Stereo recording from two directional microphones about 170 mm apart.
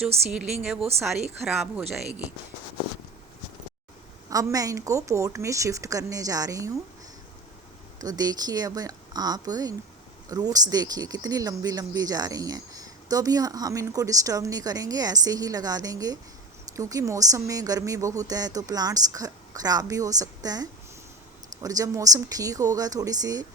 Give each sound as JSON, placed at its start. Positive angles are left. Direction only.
{"t": 0.3, "sound": "a woman's voice", "side_deg": -5}
{"t": 4.3, "sound": "speech", "side_deg": -20}
{"t": 7.9, "sound": "speech", "side_deg": -20}